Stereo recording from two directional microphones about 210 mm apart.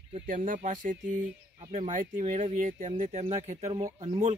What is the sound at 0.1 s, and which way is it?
Speech, 40° right (ahead or behind).